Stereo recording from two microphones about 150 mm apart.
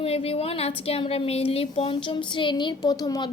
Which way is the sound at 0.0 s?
40° left (ahead or behind).